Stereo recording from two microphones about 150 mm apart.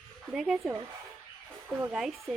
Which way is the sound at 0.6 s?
20° right (ahead or behind).